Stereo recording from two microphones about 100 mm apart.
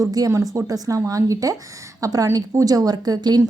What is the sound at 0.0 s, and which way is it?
A woman's voice, 35° right (ahead or behind).